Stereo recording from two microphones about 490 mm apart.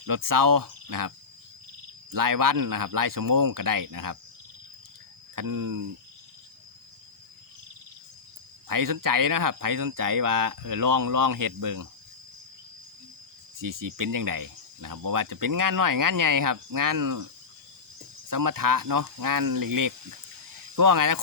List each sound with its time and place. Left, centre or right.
0.0 s speech: right
5.3 s speech: right
8.6 s speech: right
13.6 s speech: right
18.3 s speech: right